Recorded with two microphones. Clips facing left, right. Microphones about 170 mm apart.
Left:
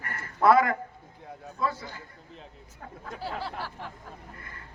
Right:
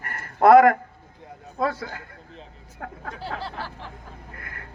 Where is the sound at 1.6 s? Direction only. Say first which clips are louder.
Right 5 dB; 75° right (ahead or behind).